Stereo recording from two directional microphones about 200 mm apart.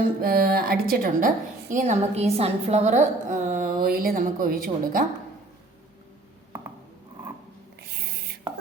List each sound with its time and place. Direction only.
0.2 s a woman's voice: 50° right (ahead or behind)
1.7 s a woman's voice: 35° right (ahead or behind)